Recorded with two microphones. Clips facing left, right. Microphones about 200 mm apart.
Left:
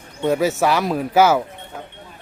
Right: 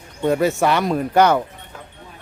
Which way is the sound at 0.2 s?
Centre (ahead or behind).